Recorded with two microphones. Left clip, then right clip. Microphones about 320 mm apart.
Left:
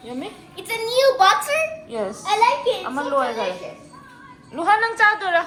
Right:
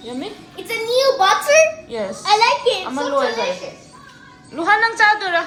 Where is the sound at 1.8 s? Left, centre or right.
Centre.